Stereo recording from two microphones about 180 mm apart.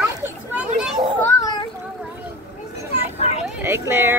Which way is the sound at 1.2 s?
20° left (ahead or behind).